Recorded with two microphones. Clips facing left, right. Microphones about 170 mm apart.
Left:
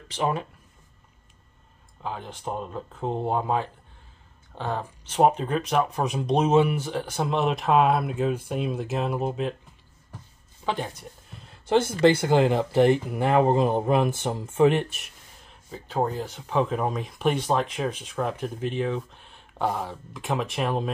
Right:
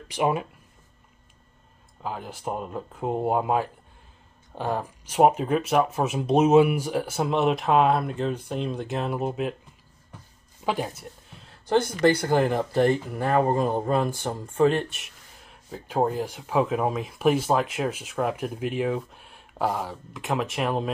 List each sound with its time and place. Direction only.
0.1 s speech: 10° right (ahead or behind)
2.0 s speech: 5° right (ahead or behind)
10.6 s speech: 10° right (ahead or behind)
11.7 s speech: 20° left (ahead or behind)
14.9 s speech: centre (ahead or behind)